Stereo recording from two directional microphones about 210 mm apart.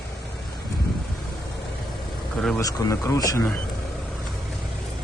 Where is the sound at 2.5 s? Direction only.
15° left (ahead or behind).